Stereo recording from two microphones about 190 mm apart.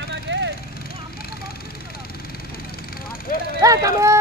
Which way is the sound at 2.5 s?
50° left (ahead or behind).